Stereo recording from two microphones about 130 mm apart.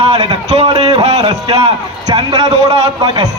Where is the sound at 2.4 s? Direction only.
55° right (ahead or behind).